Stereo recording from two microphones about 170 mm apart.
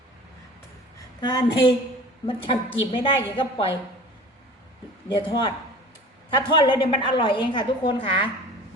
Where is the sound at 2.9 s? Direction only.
30° left (ahead or behind).